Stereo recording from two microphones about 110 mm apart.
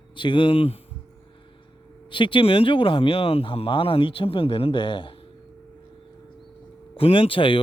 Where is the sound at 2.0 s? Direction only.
50° left (ahead or behind).